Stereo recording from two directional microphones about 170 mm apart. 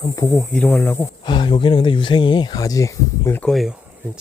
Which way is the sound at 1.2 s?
25° left (ahead or behind).